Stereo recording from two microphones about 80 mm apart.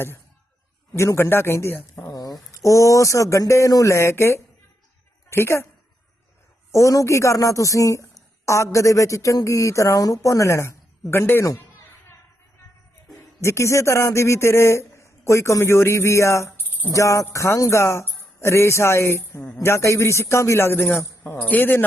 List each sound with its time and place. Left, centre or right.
0.9 s a woman's voice: left
2.1 s a woman's voice: left
6.7 s a woman's voice: left
13.4 s a woman's voice: left